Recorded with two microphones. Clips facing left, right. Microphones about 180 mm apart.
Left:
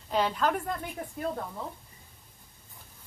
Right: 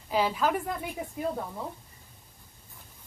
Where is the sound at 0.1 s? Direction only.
5° right (ahead or behind).